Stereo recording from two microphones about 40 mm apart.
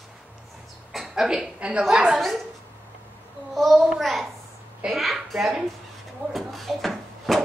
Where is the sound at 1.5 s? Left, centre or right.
Right.